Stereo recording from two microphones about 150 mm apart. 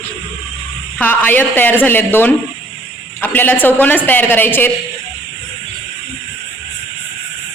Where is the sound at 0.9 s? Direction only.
10° left (ahead or behind).